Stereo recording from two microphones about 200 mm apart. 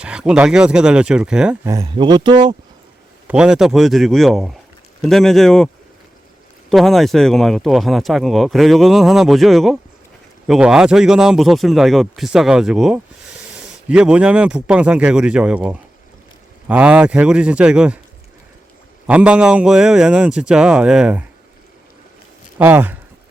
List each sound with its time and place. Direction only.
0.0 s speech: 5° right (ahead or behind)
1.6 s speech: 15° right (ahead or behind)
3.2 s speech: 5° right (ahead or behind)
19.0 s speech: 5° right (ahead or behind)
22.5 s speech: 10° right (ahead or behind)